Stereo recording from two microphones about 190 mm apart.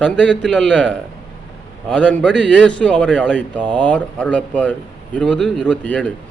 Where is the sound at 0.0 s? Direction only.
5° left (ahead or behind).